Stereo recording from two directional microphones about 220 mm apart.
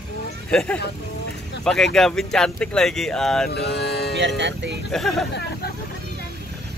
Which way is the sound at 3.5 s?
50° left (ahead or behind).